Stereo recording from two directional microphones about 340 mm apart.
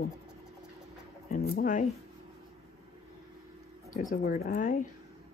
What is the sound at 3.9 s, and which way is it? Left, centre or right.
Speech, left.